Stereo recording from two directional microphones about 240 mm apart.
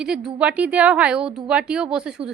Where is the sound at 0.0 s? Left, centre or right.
Centre.